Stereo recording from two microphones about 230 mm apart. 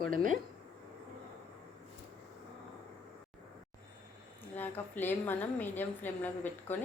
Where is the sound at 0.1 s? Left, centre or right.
Right.